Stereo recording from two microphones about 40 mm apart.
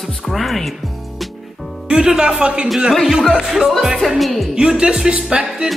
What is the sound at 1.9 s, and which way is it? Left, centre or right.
Speech, centre.